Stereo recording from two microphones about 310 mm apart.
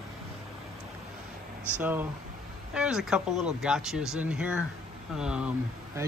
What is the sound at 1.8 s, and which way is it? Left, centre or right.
Speech, centre.